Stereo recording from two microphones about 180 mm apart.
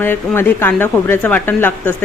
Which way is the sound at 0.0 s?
10° left (ahead or behind).